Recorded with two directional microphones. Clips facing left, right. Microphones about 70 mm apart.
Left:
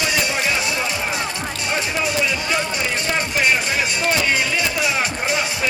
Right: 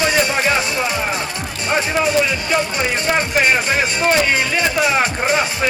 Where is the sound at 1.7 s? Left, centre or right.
Right.